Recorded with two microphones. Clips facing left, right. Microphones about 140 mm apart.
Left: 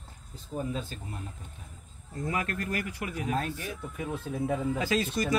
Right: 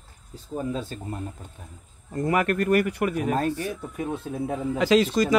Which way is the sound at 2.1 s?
70° right (ahead or behind).